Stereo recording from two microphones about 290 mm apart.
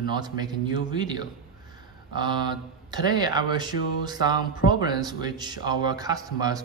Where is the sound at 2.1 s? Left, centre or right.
Centre.